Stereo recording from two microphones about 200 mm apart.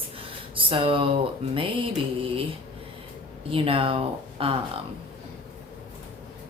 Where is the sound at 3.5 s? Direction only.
25° right (ahead or behind).